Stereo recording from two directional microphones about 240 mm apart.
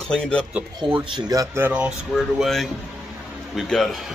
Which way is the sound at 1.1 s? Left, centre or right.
Centre.